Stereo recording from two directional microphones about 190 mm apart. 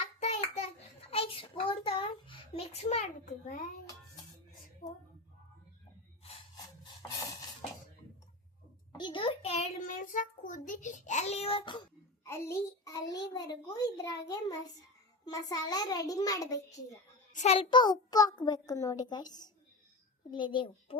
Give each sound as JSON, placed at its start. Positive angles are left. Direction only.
{"t": 0.2, "sound": "child singing", "side_deg": 35}
{"t": 4.8, "sound": "a woman's voice", "side_deg": 45}
{"t": 8.9, "sound": "a child's voice", "side_deg": 25}
{"t": 17.3, "sound": "a child's voice", "side_deg": 35}